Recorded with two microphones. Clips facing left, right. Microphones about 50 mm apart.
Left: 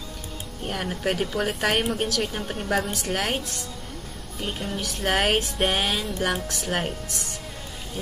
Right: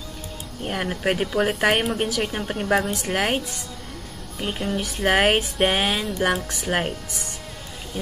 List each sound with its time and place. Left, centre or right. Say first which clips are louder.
0.7 s a woman's voice: right 3 dB; centre